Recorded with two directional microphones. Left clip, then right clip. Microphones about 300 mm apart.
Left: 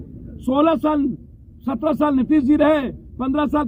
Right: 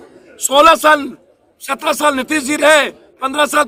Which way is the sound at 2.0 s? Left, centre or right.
Right.